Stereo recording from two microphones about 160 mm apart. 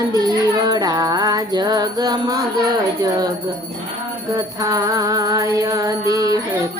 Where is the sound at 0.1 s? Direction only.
25° right (ahead or behind).